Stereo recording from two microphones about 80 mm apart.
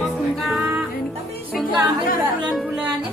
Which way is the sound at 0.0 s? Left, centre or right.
Centre.